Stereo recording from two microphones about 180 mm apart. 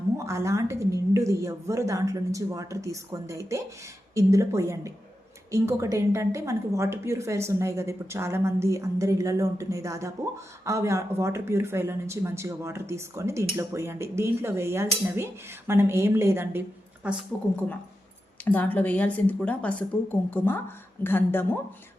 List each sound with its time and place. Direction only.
0.3 s a woman's voice: 15° right (ahead or behind)
18.4 s a woman's voice: 10° left (ahead or behind)